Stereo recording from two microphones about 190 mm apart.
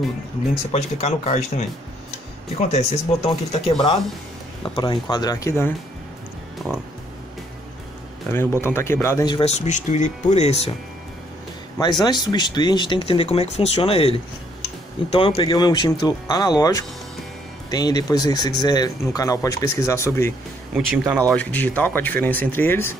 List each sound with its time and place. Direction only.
0.7 s speech: 35° left (ahead or behind)
2.7 s speech: 35° left (ahead or behind); by 5.7 s 15° left (ahead or behind)
8.3 s speech: 10° left (ahead or behind)
9.4 s speech: 35° left (ahead or behind)
11.8 s speech: 20° left (ahead or behind)
20.7 s speech: 5° right (ahead or behind)
21.3 s speech: 5° left (ahead or behind)